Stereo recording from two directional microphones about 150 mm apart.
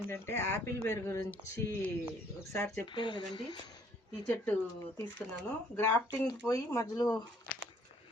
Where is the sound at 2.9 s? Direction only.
35° left (ahead or behind).